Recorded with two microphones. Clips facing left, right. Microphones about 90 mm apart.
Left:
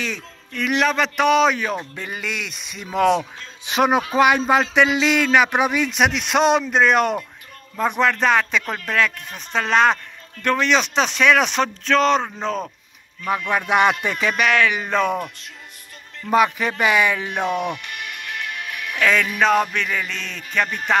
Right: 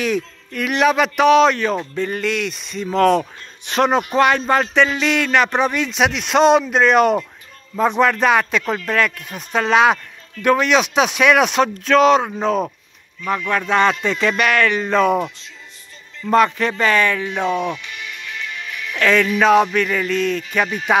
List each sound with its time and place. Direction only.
0.0 s speech: 5° right (ahead or behind)
13.5 s speech: 15° left (ahead or behind)
17.8 s music: 55° left (ahead or behind)
18.9 s speech: centre (ahead or behind)